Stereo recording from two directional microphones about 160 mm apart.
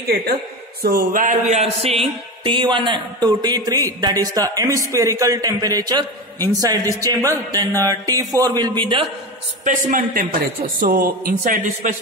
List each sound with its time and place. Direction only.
0.8 s a man's voice: 65° right (ahead or behind)
1.5 s a sound: 40° right (ahead or behind)
2.4 s a man's voice: 30° right (ahead or behind)
9.7 s a man's voice: 55° right (ahead or behind)